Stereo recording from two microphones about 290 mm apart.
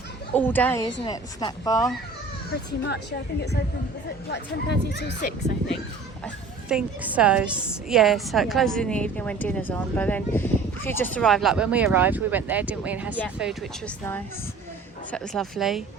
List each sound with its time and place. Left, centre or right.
0.3 s speech: centre
2.8 s speech: left
6.2 s a woman's voice: centre